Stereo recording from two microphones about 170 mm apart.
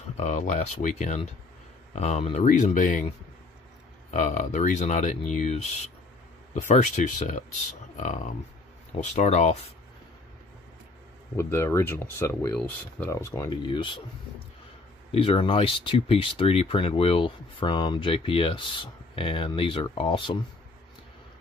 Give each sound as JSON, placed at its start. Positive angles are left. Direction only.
{"t": 0.2, "sound": "speech", "side_deg": 45}
{"t": 4.1, "sound": "speech", "side_deg": 45}
{"t": 11.3, "sound": "speech", "side_deg": 15}
{"t": 15.0, "sound": "speech", "side_deg": 35}